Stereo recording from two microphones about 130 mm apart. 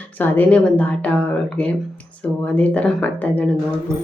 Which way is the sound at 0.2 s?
15° left (ahead or behind).